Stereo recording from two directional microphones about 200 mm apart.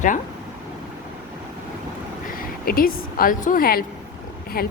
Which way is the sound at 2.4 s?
45° left (ahead or behind).